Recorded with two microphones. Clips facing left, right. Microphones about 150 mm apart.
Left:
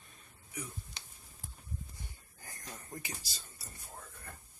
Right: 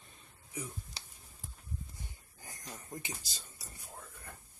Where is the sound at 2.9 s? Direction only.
20° right (ahead or behind).